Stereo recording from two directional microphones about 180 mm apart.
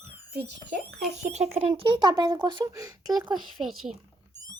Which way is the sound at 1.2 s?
40° right (ahead or behind).